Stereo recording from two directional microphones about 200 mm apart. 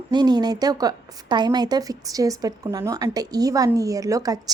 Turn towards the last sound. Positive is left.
turn(degrees=-15)  # may be behind; listen again after turning